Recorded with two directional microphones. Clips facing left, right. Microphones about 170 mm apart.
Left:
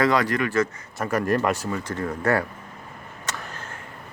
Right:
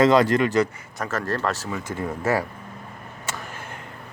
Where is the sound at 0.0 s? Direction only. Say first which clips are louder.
Right 4 dB; 25° right (ahead or behind).